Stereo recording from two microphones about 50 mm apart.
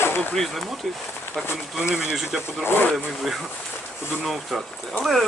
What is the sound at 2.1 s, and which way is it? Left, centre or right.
Speech, centre.